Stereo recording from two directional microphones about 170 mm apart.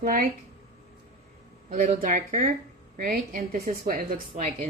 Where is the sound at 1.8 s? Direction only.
55° right (ahead or behind).